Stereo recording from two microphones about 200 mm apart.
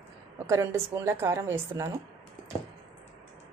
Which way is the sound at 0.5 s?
15° right (ahead or behind).